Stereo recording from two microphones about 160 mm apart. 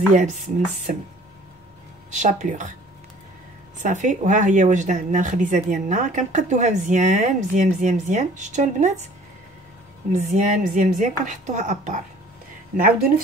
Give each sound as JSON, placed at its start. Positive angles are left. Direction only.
{"t": 0.1, "sound": "speech", "side_deg": -55}
{"t": 2.0, "sound": "speech", "side_deg": -50}
{"t": 3.7, "sound": "speech", "side_deg": -50}
{"t": 10.1, "sound": "speech", "side_deg": -50}